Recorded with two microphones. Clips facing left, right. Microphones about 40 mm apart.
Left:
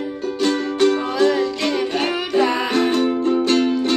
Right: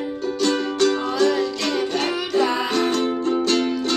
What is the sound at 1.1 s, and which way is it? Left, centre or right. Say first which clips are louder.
Music: left 2 dB; centre.